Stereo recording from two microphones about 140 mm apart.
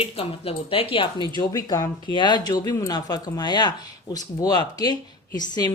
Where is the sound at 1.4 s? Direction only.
25° left (ahead or behind).